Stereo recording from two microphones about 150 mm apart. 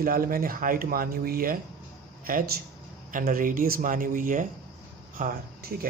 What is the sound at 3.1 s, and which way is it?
Speech, 65° right (ahead or behind).